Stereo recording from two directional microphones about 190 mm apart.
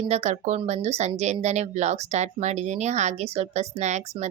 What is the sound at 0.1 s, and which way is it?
Speech, 35° right (ahead or behind).